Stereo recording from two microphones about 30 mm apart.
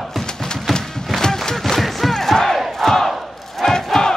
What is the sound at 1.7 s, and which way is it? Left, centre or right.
Crowd, centre.